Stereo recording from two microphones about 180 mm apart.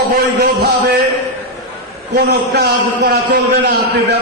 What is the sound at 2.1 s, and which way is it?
A man's voice, 60° right (ahead or behind).